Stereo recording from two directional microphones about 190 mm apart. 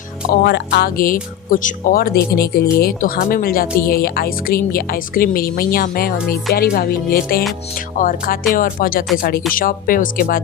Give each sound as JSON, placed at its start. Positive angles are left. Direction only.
{"t": 0.4, "sound": "speech", "side_deg": 60}